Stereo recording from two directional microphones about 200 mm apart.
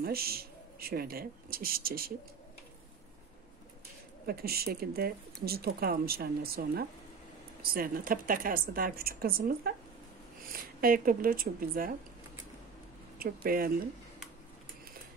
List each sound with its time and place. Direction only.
0.0 s speech: 50° right (ahead or behind)
4.3 s speech: 50° right (ahead or behind)
13.2 s speech: 50° right (ahead or behind)